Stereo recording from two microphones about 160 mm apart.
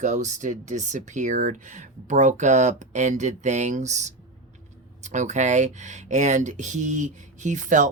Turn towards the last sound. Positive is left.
turn(degrees=-50)  # may be behind; listen again after turning